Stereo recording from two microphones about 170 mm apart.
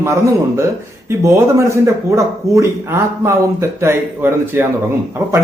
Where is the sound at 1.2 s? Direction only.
15° right (ahead or behind).